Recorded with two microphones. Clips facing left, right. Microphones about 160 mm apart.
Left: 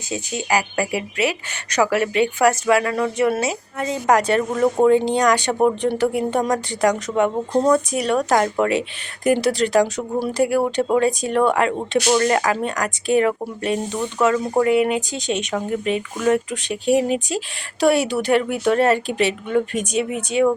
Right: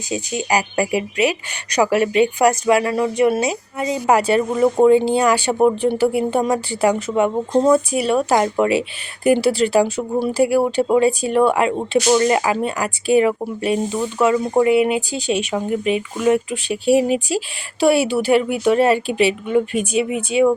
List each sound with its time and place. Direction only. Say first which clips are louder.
0.1 s speech: right 2 dB; 15° right (ahead or behind)